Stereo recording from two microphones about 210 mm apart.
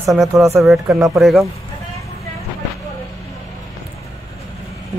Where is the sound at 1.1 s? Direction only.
Centre (ahead or behind).